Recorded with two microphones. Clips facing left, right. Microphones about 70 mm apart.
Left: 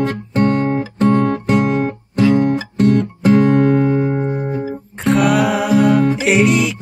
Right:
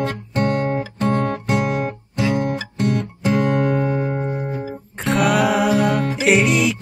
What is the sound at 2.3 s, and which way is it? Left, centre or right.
Music, left.